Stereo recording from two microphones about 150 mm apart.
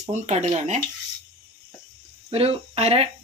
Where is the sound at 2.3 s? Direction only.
40° right (ahead or behind).